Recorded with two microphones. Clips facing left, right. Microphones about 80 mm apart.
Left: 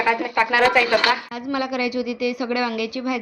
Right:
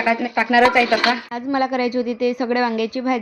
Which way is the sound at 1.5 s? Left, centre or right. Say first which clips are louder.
Right 4 dB; right.